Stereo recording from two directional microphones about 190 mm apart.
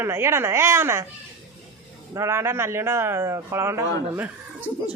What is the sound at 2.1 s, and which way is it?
Speech, 15° right (ahead or behind).